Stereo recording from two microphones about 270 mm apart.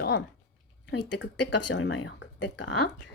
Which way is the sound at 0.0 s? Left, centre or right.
Left.